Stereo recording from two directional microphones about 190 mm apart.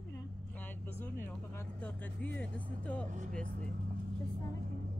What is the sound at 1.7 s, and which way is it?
Speech, 5° left (ahead or behind).